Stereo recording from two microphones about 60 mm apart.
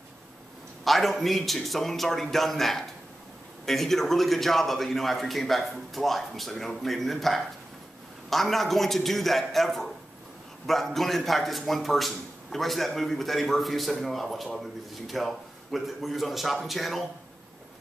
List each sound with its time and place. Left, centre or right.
0.8 s speech: centre